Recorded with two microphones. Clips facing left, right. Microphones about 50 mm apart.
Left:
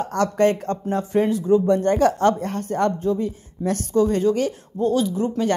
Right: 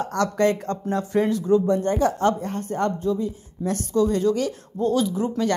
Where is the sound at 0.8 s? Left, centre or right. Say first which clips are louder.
Left 1 dB; left.